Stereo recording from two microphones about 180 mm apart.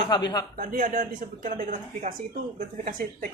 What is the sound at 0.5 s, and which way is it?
Speech, 50° right (ahead or behind).